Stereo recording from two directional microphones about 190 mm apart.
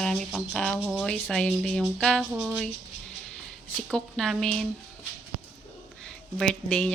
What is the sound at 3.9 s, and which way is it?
Speech, centre (ahead or behind).